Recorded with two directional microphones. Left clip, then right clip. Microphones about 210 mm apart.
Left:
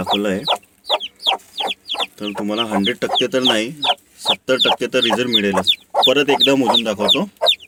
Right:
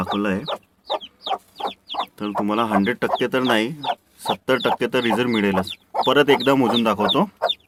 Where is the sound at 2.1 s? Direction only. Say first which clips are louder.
Even; 10° right (ahead or behind).